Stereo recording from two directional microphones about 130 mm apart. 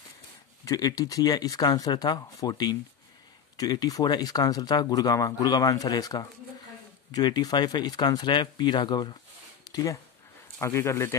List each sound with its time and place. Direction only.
0.7 s speech: 30° left (ahead or behind)